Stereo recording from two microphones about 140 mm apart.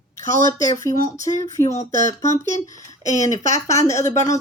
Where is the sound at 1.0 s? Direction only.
60° left (ahead or behind).